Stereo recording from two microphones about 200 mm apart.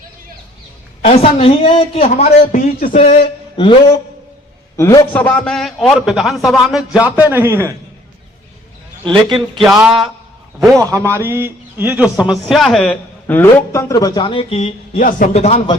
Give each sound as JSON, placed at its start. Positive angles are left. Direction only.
{"t": 1.0, "sound": "a man's voice", "side_deg": 30}
{"t": 4.8, "sound": "a man's voice", "side_deg": 15}
{"t": 9.6, "sound": "a man's voice", "side_deg": 0}
{"t": 10.8, "sound": "a man's voice", "side_deg": -15}